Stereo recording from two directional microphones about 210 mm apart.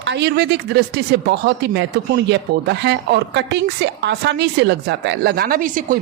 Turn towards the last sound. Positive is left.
turn(degrees=-40)  # may be behind; listen again after turning